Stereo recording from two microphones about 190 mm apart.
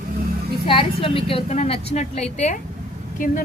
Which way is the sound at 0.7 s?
30° left (ahead or behind).